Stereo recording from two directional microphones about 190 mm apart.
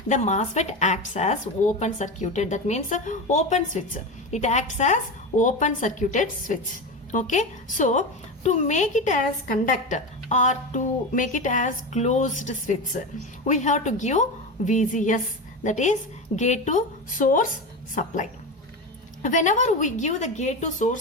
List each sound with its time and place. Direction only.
0.1 s a woman's voice: 35° left (ahead or behind)
19.2 s speech: 40° left (ahead or behind)